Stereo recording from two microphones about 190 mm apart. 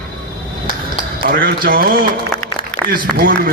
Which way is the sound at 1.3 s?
50° right (ahead or behind).